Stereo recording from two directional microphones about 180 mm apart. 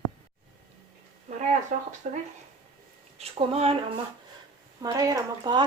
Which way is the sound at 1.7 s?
45° right (ahead or behind).